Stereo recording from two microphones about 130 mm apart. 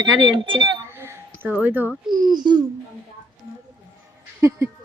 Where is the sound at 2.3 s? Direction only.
35° right (ahead or behind).